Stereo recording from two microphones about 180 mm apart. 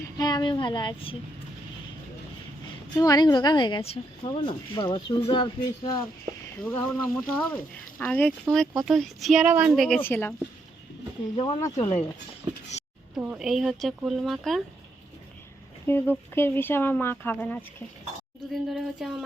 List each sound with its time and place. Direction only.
0.2 s speech: 25° left (ahead or behind)
2.9 s speech: 20° left (ahead or behind)
6.7 s a woman's voice: 10° left (ahead or behind)
11.3 s speech: 25° left (ahead or behind)
12.4 s a sound: 25° right (ahead or behind)
13.1 s a woman's voice: 5° right (ahead or behind)
15.9 s speech: 10° left (ahead or behind)
18.5 s a woman's voice: centre (ahead or behind)